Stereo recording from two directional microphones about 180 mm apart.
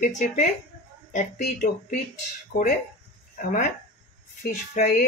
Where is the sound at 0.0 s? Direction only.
45° left (ahead or behind).